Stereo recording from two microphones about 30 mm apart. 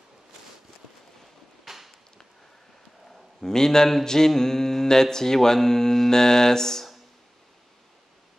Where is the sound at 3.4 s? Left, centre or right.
Centre.